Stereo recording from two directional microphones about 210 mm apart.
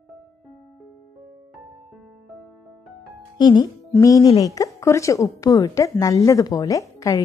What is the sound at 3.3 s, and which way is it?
A woman's voice, 20° left (ahead or behind).